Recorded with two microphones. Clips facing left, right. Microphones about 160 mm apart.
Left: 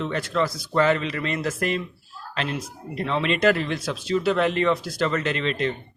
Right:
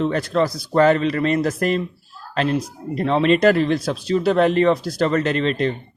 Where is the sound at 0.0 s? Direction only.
40° right (ahead or behind).